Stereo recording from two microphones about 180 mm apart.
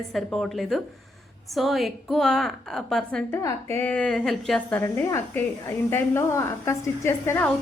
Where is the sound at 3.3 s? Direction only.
15° left (ahead or behind).